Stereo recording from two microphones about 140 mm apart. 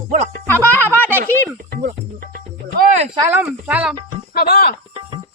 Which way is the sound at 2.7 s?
75° right (ahead or behind).